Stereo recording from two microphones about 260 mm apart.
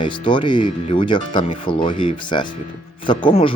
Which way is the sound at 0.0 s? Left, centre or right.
Centre.